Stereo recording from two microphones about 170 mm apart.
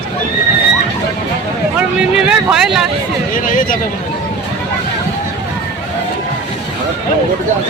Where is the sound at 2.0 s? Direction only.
5° right (ahead or behind).